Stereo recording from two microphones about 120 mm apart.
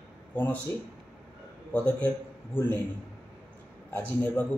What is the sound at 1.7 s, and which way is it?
A man's voice, 15° left (ahead or behind).